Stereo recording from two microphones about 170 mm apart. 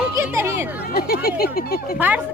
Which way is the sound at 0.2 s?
15° right (ahead or behind).